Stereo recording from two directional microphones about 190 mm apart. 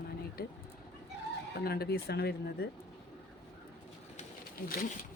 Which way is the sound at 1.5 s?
55° left (ahead or behind).